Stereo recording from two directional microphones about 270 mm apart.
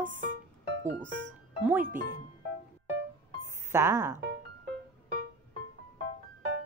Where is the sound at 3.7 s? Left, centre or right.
Centre.